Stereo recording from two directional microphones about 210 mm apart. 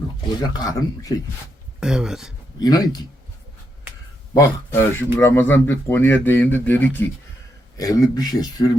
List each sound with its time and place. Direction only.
0.4 s speech: 20° left (ahead or behind)
1.8 s speech: 5° right (ahead or behind)
2.6 s speech: 20° left (ahead or behind)
4.4 s speech: 10° left (ahead or behind)